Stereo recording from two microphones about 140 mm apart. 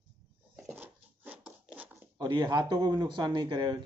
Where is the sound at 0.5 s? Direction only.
10° right (ahead or behind).